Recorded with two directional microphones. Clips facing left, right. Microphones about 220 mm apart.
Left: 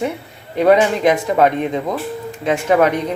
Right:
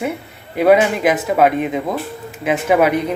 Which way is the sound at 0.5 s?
5° right (ahead or behind).